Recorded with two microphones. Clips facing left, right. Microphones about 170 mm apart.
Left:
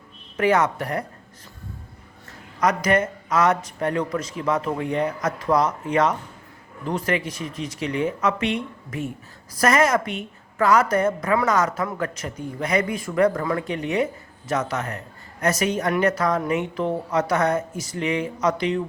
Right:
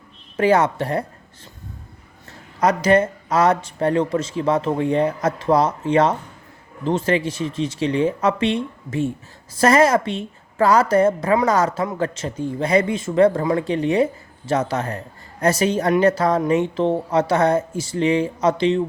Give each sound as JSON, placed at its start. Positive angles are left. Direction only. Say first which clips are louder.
{"t": 0.3, "sound": "a woman's voice", "louder": "right 3 dB", "side_deg": -30}
{"t": 2.6, "sound": "a woman's voice", "louder": "right 4 dB", "side_deg": -30}